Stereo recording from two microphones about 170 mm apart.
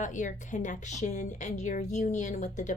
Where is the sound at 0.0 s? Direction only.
45° left (ahead or behind).